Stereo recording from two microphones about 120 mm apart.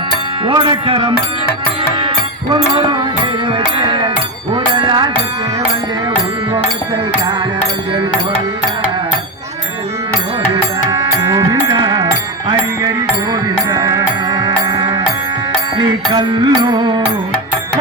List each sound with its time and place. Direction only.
0.4 s music: 40° right (ahead or behind)
10.5 s music: 35° right (ahead or behind)
13.3 s music: 30° right (ahead or behind)